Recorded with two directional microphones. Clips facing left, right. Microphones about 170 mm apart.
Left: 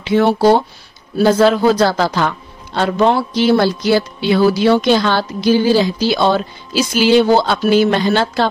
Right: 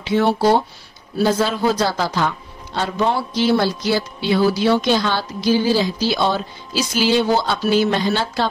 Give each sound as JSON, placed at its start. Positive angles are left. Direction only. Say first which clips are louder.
{"t": 0.0, "sound": "speech", "louder": "left 4 dB", "side_deg": 65}